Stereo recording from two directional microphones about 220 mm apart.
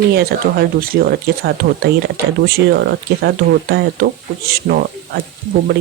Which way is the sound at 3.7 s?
45° right (ahead or behind).